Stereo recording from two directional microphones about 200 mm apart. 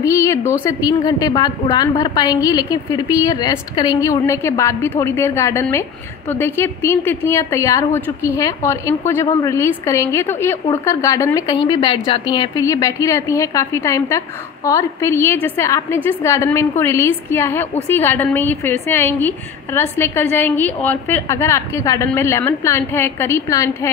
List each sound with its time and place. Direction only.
0.0 s a woman's voice: 15° left (ahead or behind)